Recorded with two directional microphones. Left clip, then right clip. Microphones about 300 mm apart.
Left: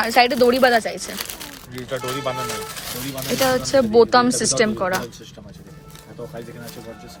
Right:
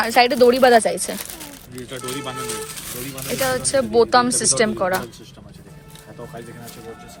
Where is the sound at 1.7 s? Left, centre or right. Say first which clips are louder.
Left 4 dB; left.